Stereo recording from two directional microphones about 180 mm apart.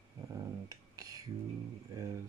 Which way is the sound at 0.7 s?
20° right (ahead or behind).